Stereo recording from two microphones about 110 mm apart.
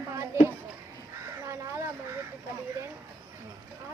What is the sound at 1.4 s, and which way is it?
Speech, 25° right (ahead or behind).